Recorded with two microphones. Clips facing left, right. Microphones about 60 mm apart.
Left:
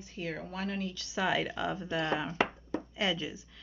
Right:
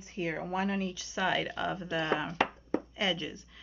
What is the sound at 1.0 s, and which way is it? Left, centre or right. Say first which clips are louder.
Speech: left 2 dB; centre.